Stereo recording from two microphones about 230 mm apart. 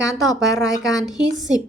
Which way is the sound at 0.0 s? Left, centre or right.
Centre.